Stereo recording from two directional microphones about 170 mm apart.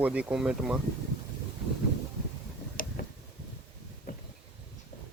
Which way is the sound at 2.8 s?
55° left (ahead or behind).